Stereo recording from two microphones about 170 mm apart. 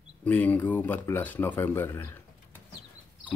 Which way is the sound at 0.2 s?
10° left (ahead or behind).